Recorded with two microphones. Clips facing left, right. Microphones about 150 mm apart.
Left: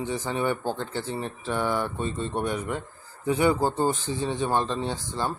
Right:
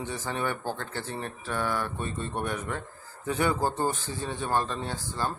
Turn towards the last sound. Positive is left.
turn(degrees=20)  # may be behind; listen again after turning